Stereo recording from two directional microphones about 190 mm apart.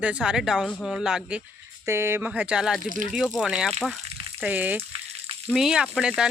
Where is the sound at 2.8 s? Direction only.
45° right (ahead or behind).